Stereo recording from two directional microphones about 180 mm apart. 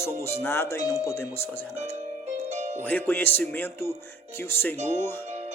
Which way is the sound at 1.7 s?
40° right (ahead or behind).